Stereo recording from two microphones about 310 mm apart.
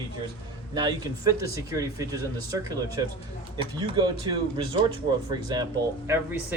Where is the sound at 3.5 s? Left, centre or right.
Centre.